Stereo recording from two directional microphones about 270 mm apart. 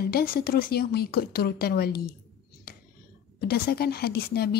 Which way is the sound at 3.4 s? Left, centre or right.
Left.